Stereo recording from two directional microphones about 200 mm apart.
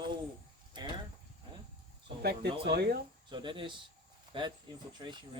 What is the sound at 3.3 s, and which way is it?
Speech, 25° right (ahead or behind).